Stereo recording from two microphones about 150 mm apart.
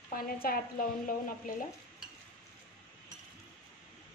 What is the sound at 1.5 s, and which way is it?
Stir, 70° left (ahead or behind).